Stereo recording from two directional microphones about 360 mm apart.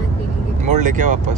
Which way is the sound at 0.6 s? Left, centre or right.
Right.